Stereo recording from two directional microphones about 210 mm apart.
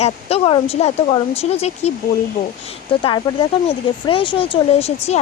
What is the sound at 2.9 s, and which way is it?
Speech, 25° left (ahead or behind).